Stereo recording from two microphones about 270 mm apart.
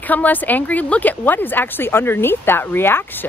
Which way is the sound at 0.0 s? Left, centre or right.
Centre.